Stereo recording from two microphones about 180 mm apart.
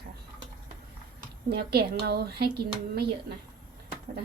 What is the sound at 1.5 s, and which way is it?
Speech, 60° right (ahead or behind).